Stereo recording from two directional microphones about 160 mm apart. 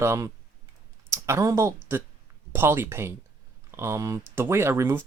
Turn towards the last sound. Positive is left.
turn(degrees=-15)  # may be behind; listen again after turning